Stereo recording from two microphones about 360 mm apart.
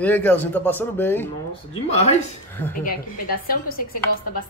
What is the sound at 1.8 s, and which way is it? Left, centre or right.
Speech, centre.